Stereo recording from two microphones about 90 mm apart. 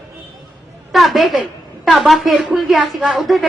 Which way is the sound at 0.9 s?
Centre (ahead or behind).